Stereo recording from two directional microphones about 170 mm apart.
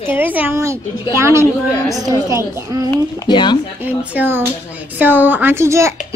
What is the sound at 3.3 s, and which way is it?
Speech, 25° left (ahead or behind).